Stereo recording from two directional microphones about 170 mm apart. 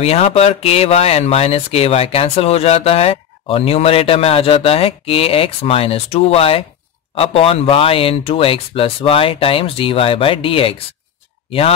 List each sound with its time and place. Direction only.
0.0 s speech: 40° left (ahead or behind)